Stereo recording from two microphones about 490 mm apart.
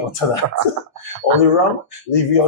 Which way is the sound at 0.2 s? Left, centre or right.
Left.